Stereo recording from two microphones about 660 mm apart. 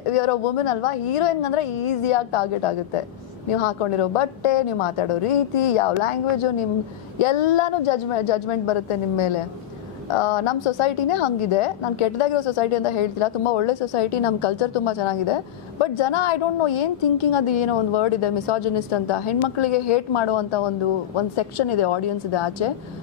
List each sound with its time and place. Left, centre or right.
0.1 s a woman's voice: left